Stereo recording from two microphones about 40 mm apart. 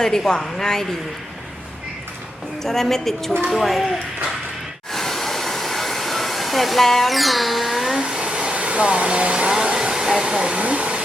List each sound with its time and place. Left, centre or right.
0.0 s a woman's voice: centre
2.6 s a woman's voice: centre
4.9 s hair dryer: centre
7.9 s vacuum cleaner: centre
8.2 s hair dryer: right
9.6 s train: right
9.9 s hair dryer: centre
10.3 s speech: right